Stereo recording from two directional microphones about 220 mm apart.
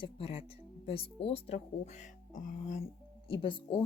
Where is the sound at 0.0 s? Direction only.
25° left (ahead or behind).